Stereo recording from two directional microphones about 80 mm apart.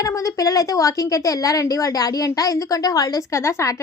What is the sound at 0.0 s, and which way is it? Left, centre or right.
A woman's voice, left.